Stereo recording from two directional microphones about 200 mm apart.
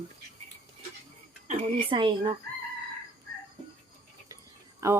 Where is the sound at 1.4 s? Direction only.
30° right (ahead or behind).